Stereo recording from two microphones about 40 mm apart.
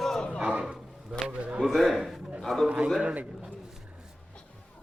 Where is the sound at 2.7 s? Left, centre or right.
Right.